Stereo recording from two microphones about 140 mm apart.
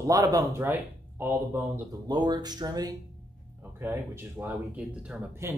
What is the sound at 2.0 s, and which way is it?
Speech, 30° right (ahead or behind).